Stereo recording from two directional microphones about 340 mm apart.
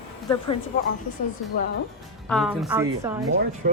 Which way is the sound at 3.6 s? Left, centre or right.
Right.